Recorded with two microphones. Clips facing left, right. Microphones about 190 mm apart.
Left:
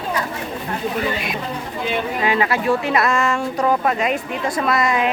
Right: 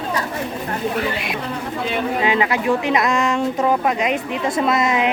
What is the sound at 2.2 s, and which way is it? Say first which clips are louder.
A woman's voice: even; 20° right (ahead or behind).